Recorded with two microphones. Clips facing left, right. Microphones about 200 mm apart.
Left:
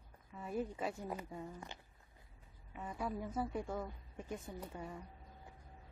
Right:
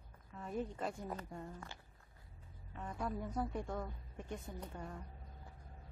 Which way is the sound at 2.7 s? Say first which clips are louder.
Even; 5° left (ahead or behind).